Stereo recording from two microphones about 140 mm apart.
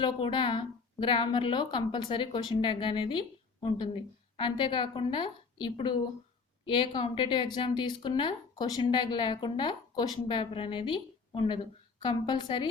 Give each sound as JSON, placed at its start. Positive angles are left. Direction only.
{"t": 0.0, "sound": "a woman's voice", "side_deg": 35}